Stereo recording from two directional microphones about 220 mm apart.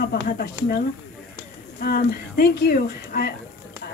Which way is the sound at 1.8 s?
45° left (ahead or behind).